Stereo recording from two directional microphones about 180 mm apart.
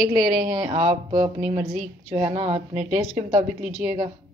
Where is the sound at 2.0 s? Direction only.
35° right (ahead or behind).